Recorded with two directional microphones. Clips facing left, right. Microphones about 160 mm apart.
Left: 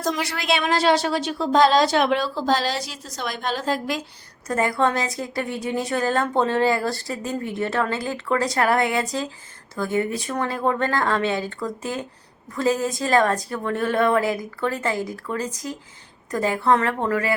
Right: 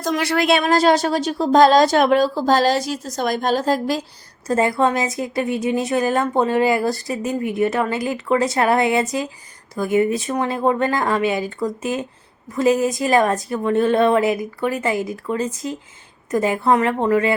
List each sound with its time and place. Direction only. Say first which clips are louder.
0.2 s speech: right 7 dB; 60° right (ahead or behind)
0.6 s speech: right 4 dB; 45° right (ahead or behind)
4.4 s a woman's voice: right 4 dB; 25° right (ahead or behind)